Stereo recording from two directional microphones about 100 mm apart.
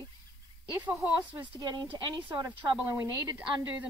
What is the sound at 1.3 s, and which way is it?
Speech, 50° right (ahead or behind).